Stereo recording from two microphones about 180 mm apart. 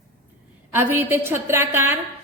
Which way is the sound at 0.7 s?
10° right (ahead or behind).